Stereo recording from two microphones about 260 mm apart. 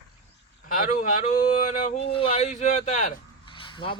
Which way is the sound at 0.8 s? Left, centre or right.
Left.